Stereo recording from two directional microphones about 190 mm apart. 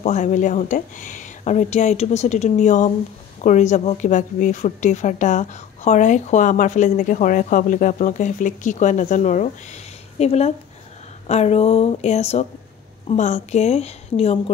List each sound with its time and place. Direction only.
0.0 s a woman's voice: 40° left (ahead or behind)